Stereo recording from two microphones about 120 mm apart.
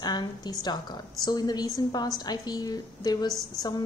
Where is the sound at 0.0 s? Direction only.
35° left (ahead or behind).